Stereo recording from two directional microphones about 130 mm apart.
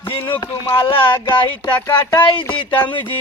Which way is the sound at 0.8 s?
40° left (ahead or behind).